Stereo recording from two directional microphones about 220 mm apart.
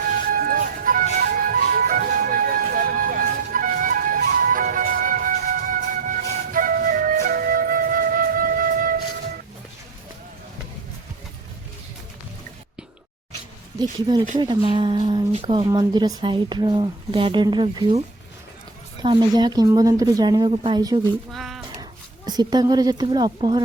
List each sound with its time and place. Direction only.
0.3 s music: 40° right (ahead or behind)
14.3 s a woman's voice: 20° right (ahead or behind)
19.0 s a woman's voice: 20° right (ahead or behind)
21.3 s a sound: centre (ahead or behind)
22.3 s a woman's voice: 20° right (ahead or behind)